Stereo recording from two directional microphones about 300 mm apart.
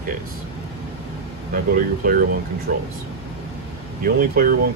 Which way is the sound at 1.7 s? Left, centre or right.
Right.